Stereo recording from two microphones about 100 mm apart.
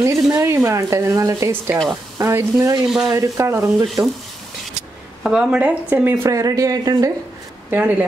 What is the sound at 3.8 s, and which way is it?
Speech, centre (ahead or behind).